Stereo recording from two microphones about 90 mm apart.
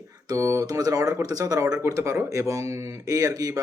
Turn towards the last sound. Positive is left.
turn(degrees=-40)  # may be behind; listen again after turning